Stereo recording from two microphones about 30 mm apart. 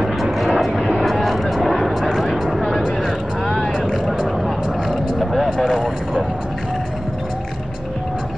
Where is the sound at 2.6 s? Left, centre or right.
Centre.